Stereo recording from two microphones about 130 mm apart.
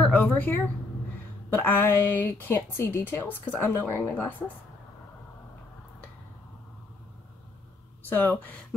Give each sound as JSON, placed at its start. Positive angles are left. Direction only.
{"t": 0.0, "sound": "a woman's voice", "side_deg": 15}
{"t": 8.0, "sound": "speech", "side_deg": 15}